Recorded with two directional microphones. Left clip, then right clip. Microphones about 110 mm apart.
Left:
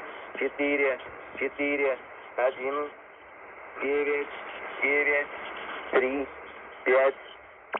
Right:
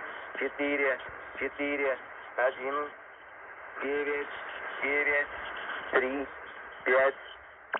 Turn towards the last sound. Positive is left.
turn(degrees=35)  # may be behind; listen again after turning